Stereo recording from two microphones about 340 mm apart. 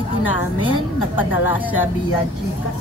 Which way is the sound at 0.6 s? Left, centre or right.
Centre.